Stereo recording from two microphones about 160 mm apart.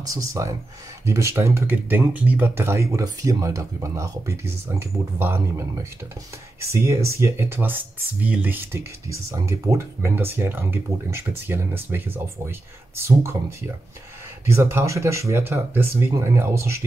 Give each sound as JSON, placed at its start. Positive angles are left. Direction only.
{"t": 0.0, "sound": "speech", "side_deg": -20}